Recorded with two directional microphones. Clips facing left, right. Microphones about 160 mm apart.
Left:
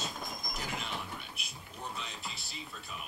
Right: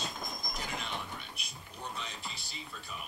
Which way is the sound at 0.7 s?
5° left (ahead or behind).